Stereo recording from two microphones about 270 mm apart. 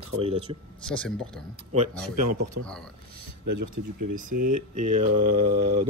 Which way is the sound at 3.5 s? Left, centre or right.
Right.